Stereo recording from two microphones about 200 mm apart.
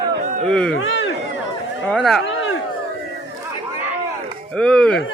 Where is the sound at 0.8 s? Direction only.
75° left (ahead or behind).